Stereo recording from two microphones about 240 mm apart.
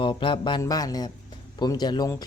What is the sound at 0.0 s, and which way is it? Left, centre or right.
Speech, left.